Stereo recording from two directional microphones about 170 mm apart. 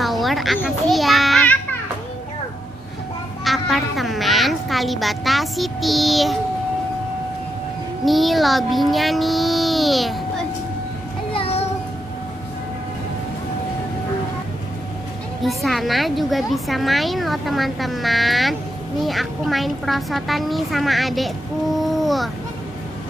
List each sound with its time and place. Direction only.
0.0 s children playing: centre (ahead or behind)
3.4 s a child's voice: centre (ahead or behind)
8.0 s a child's voice: centre (ahead or behind)
11.3 s music: 35° left (ahead or behind)
15.4 s a woman's voice: centre (ahead or behind)